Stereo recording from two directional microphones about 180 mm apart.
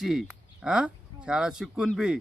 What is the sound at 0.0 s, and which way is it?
A man's voice, centre (ahead or behind).